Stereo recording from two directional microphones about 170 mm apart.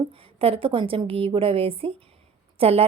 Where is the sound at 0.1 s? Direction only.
35° right (ahead or behind).